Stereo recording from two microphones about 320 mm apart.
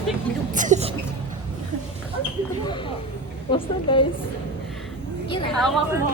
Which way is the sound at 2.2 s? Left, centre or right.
Centre.